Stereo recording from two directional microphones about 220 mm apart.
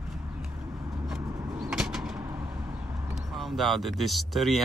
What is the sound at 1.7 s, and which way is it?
Bird, centre (ahead or behind).